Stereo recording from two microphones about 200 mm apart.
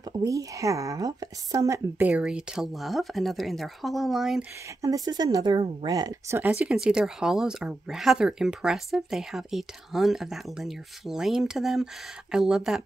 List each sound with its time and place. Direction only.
0.1 s speech: 15° right (ahead or behind); by 4.5 s centre (ahead or behind)
4.8 s speech: 20° right (ahead or behind); by 12.8 s centre (ahead or behind)